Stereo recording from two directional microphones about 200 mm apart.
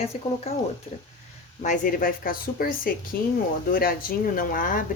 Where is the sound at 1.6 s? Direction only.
40° left (ahead or behind).